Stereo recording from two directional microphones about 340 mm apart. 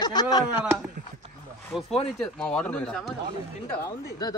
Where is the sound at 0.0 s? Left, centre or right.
Centre.